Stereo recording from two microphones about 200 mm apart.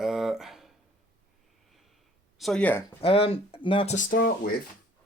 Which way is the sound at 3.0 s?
30° left (ahead or behind).